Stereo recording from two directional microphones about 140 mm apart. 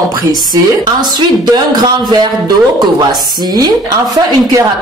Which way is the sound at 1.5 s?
30° right (ahead or behind).